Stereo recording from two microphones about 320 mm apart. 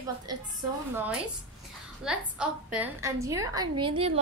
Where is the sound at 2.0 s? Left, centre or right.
Centre.